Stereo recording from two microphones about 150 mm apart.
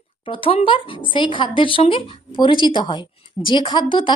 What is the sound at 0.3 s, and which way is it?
A woman's voice, 35° left (ahead or behind).